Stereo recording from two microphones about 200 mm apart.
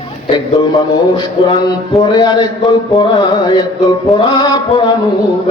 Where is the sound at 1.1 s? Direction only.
20° left (ahead or behind).